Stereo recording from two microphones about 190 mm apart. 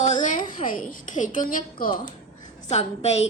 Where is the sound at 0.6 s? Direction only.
45° left (ahead or behind).